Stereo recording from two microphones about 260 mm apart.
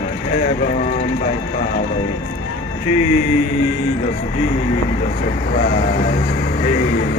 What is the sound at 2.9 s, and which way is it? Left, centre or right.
Music, left.